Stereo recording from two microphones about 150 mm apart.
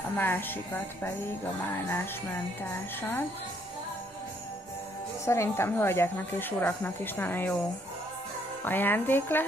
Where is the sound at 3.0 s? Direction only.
15° left (ahead or behind).